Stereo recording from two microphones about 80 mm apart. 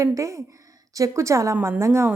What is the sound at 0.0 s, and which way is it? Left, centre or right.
A woman's voice, right.